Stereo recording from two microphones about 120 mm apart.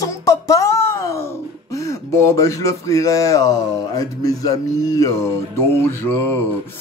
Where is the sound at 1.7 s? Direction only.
25° left (ahead or behind).